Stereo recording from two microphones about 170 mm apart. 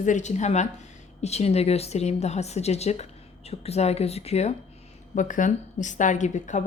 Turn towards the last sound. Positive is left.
turn(degrees=45)  # may be behind; listen again after turning